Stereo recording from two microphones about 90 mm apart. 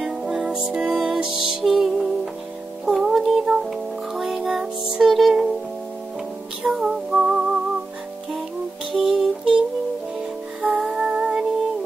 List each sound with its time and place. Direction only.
0.0 s music: 5° right (ahead or behind)
6.6 s music: 5° right (ahead or behind)
8.9 s music: 5° right (ahead or behind)
10.8 s music: 10° right (ahead or behind)